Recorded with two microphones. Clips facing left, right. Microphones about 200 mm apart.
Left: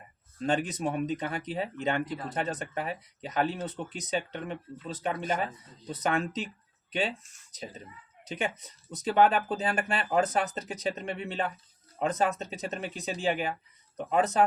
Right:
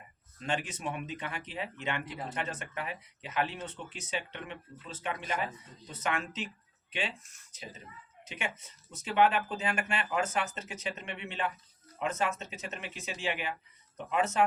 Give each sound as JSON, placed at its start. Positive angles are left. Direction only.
{"t": 0.3, "sound": "speech", "side_deg": 35}
{"t": 7.5, "sound": "speech", "side_deg": 35}